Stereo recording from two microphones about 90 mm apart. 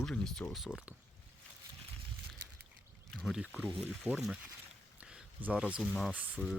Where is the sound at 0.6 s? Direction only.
Centre (ahead or behind).